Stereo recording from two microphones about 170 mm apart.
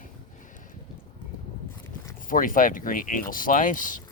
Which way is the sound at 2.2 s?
55° left (ahead or behind).